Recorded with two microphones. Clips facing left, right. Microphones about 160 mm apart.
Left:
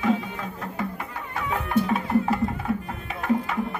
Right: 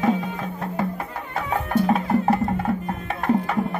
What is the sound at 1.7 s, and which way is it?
Music, 40° right (ahead or behind).